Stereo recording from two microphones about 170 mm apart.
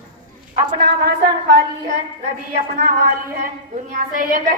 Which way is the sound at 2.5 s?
65° right (ahead or behind).